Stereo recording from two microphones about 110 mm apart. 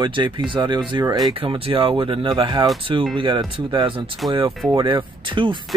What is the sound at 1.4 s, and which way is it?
Speech, 55° right (ahead or behind).